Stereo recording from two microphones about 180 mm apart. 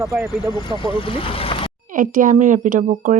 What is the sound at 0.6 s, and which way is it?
Speech, 30° left (ahead or behind).